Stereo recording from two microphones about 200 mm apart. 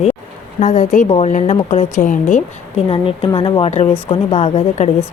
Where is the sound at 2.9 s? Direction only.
25° left (ahead or behind).